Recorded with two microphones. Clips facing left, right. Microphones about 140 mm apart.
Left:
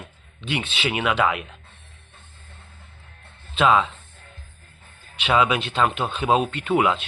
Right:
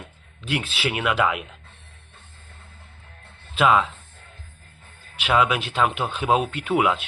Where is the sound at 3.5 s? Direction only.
5° right (ahead or behind).